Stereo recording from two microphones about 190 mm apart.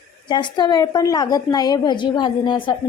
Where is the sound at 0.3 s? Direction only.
25° left (ahead or behind).